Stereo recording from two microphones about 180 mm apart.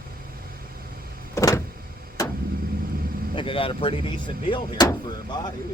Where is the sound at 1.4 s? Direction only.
15° left (ahead or behind).